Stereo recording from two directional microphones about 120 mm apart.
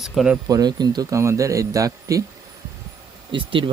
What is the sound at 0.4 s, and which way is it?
A man's voice, 35° right (ahead or behind).